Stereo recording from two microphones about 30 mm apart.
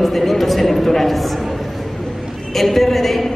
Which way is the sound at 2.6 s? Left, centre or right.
Centre.